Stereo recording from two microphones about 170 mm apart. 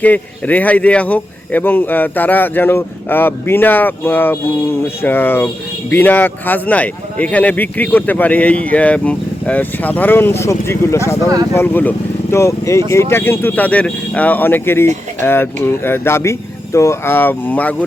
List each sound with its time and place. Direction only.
0.0 s speech: 10° left (ahead or behind)